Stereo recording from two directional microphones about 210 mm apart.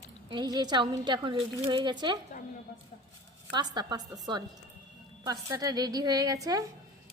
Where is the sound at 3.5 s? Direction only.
20° right (ahead or behind).